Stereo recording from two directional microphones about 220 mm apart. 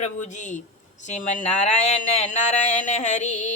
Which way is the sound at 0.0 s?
35° left (ahead or behind).